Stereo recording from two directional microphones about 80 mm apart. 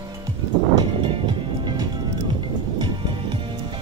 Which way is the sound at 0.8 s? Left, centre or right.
Right.